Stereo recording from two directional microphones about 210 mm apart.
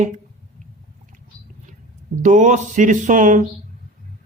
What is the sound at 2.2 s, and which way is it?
Mantra, 35° right (ahead or behind).